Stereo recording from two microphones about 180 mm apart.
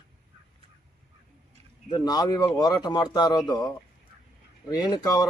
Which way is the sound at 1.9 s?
20° left (ahead or behind).